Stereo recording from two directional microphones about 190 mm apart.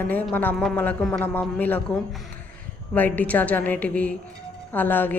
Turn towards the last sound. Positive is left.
turn(degrees=10)  # may be behind; listen again after turning